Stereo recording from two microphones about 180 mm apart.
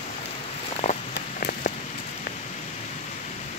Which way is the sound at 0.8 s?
40° left (ahead or behind).